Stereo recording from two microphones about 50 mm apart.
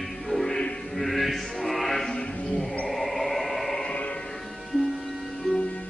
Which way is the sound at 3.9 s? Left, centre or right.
Left.